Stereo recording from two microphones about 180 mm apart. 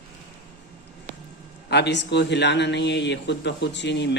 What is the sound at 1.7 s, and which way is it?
Speech, 70° left (ahead or behind).